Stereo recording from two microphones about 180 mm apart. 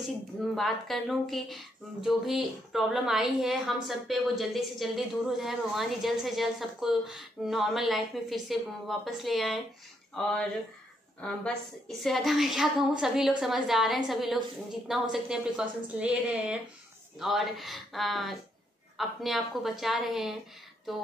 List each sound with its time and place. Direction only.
0.4 s a woman's voice: centre (ahead or behind)